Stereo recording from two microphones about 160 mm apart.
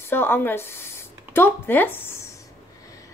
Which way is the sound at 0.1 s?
15° left (ahead or behind).